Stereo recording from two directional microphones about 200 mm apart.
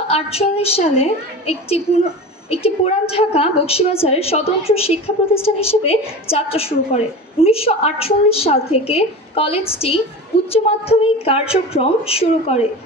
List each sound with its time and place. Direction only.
0.1 s a woman's voice: 30° left (ahead or behind)